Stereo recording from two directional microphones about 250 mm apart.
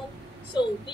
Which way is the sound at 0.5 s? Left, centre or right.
Centre.